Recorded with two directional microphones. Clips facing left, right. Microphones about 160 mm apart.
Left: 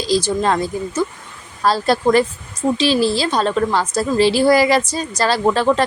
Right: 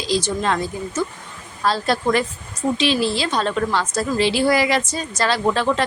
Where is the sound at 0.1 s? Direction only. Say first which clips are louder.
Left 4 dB; 35° left (ahead or behind).